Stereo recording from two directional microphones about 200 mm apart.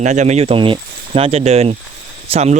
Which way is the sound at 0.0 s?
35° right (ahead or behind).